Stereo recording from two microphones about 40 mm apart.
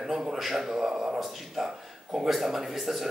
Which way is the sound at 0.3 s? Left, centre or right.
Centre.